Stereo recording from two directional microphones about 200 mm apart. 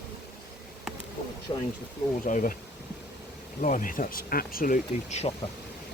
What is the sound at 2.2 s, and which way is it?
Speech, 40° left (ahead or behind).